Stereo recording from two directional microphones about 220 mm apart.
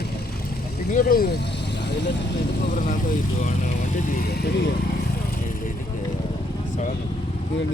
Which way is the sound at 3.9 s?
40° left (ahead or behind).